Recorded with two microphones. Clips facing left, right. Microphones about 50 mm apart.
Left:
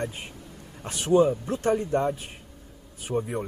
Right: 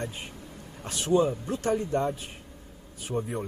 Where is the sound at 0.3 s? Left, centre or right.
Right.